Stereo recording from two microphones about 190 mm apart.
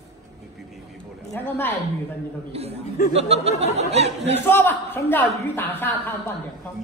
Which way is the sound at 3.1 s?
35° right (ahead or behind).